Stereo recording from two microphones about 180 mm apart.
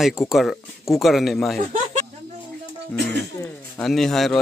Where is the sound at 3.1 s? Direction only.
10° left (ahead or behind).